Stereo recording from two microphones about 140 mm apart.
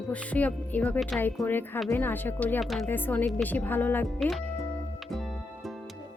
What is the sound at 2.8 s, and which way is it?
Speech, 15° left (ahead or behind).